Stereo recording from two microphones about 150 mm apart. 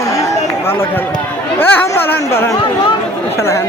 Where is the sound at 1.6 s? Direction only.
15° left (ahead or behind).